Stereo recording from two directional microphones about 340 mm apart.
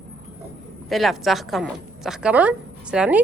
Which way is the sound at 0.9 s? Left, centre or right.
Centre.